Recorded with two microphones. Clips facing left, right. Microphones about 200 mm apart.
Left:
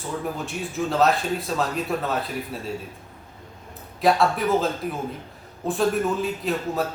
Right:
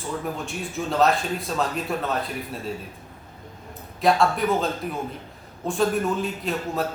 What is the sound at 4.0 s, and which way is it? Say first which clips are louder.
A man's voice: even; centre (ahead or behind).